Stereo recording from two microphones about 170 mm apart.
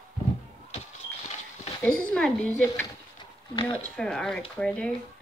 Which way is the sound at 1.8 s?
5° left (ahead or behind).